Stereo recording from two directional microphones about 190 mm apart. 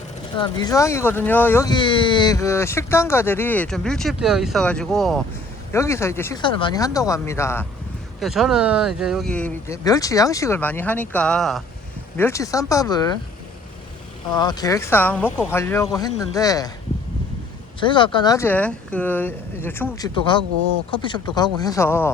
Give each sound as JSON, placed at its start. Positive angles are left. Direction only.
{"t": 0.3, "sound": "speech", "side_deg": 20}
{"t": 5.7, "sound": "speech", "side_deg": 15}
{"t": 6.4, "sound": "speech", "side_deg": 25}
{"t": 8.2, "sound": "speech", "side_deg": 0}
{"t": 12.1, "sound": "speech", "side_deg": 15}
{"t": 14.3, "sound": "speech", "side_deg": 20}
{"t": 17.7, "sound": "speech", "side_deg": 25}
{"t": 20.1, "sound": "speech", "side_deg": 25}